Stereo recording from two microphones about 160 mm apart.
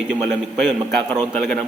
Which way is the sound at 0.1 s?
Centre (ahead or behind).